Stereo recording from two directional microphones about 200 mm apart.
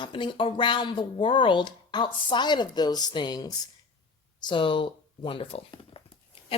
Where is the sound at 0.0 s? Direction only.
25° left (ahead or behind).